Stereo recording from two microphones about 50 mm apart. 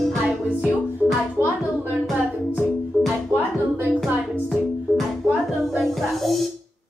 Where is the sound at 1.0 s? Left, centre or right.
Left.